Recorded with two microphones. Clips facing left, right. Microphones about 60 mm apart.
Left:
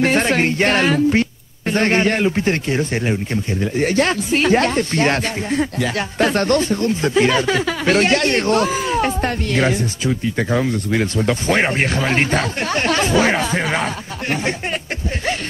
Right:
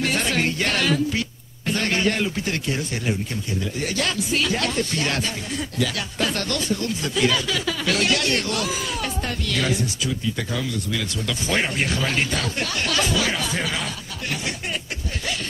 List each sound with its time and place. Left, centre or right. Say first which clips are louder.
0.0 s speech: left 7 dB; left